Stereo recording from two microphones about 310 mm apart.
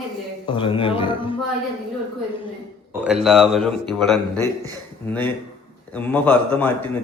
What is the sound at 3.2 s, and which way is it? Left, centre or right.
Speech, centre.